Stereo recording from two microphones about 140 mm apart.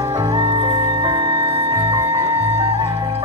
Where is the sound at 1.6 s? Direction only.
25° right (ahead or behind).